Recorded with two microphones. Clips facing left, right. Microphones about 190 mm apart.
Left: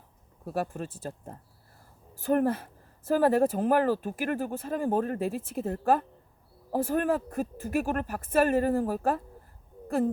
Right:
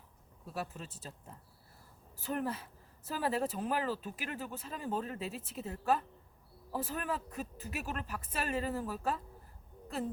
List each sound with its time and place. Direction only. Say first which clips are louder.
0.4 s speech: left 10 dB; 50° left (ahead or behind)